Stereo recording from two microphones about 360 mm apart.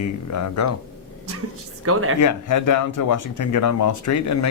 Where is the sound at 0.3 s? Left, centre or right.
Left.